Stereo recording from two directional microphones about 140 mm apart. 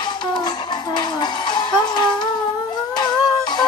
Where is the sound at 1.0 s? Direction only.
30° left (ahead or behind).